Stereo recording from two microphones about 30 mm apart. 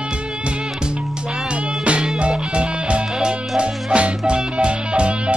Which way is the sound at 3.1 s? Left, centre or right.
Right.